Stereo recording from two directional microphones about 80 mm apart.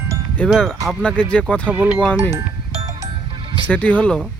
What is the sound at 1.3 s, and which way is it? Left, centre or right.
Speech, centre.